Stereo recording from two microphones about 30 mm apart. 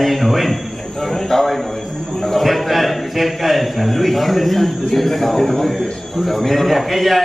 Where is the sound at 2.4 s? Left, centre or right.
Centre.